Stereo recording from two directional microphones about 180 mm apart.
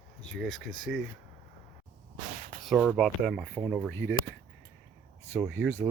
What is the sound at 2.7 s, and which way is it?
Speech, centre (ahead or behind).